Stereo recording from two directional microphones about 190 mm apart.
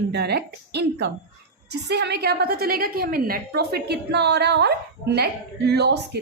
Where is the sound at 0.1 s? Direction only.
60° right (ahead or behind).